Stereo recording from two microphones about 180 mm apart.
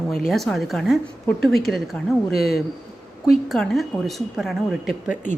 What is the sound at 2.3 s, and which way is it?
Speech, 60° left (ahead or behind).